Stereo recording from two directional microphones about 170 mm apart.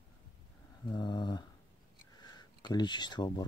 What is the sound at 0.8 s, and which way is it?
Speech, 25° left (ahead or behind).